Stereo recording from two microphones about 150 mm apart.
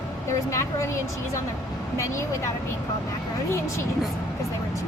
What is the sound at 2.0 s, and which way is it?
Speech, 20° left (ahead or behind).